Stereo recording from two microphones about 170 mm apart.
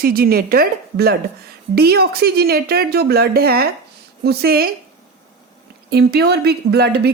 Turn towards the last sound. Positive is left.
turn(degrees=-70)  # may be behind; listen again after turning